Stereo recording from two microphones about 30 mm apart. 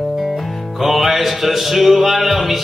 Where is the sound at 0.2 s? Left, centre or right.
Centre.